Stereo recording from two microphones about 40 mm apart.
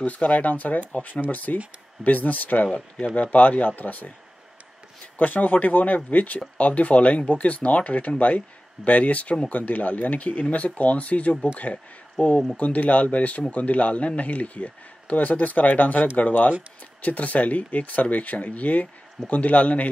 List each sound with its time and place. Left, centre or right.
0.0 s speech: left
3.2 s speech: left
5.1 s speech: left